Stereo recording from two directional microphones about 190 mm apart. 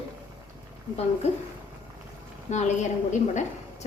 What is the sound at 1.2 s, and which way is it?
Speech, 35° left (ahead or behind).